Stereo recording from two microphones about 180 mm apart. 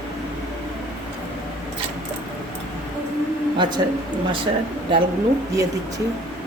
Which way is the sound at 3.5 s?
25° right (ahead or behind).